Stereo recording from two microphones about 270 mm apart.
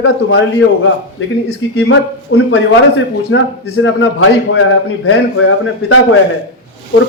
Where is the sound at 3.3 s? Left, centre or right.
Left.